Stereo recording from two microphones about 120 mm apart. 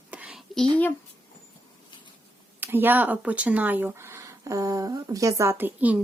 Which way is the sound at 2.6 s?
15° right (ahead or behind).